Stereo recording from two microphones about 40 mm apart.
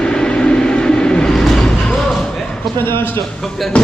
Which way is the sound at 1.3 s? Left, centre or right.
Centre.